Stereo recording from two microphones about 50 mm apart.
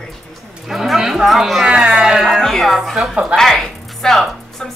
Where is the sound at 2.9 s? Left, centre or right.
Centre.